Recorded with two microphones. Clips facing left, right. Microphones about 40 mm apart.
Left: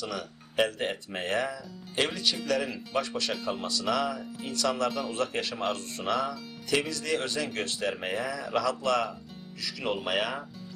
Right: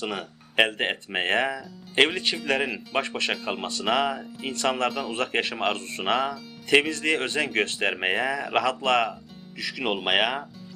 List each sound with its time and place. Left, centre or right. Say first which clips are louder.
0.0 s speech: right 4 dB; right
4.9 s speech: right 2 dB; centre
5.1 s speech: right 4 dB; right